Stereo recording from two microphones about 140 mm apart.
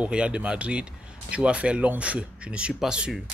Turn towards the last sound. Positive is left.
turn(degrees=-5)  # may be behind; listen again after turning